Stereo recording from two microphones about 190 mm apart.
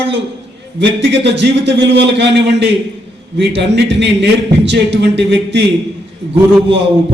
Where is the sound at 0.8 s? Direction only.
65° right (ahead or behind).